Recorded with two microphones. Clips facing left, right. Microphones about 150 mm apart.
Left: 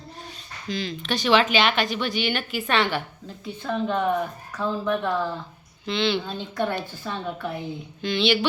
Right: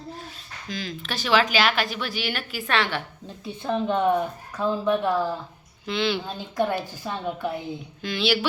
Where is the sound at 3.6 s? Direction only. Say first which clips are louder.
Right 2 dB; 15° right (ahead or behind).